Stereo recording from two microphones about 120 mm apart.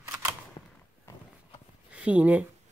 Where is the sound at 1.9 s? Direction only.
10° right (ahead or behind).